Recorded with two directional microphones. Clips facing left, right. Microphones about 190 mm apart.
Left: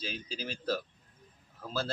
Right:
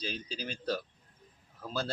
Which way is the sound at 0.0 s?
5° left (ahead or behind).